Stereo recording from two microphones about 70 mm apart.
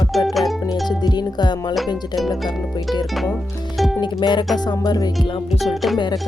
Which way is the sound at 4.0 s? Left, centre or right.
Left.